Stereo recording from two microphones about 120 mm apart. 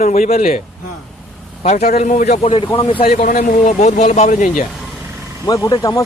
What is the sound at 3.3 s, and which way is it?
Speech, 85° left.